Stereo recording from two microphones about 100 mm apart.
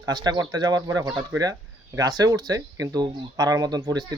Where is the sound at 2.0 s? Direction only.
40° right (ahead or behind).